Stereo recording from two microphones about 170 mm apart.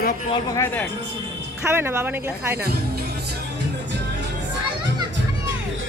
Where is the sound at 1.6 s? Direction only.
15° right (ahead or behind).